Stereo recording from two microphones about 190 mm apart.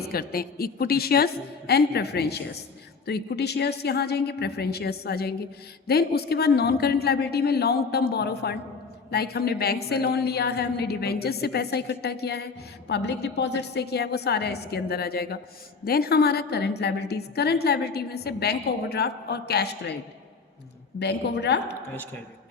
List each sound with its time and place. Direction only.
0.0 s a woman's voice: 50° left (ahead or behind)
21.0 s a woman's voice: 60° left (ahead or behind)